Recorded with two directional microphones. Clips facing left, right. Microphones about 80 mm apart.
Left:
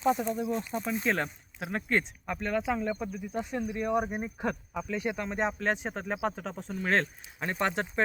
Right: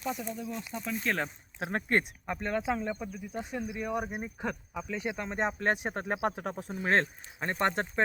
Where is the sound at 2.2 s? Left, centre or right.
Right.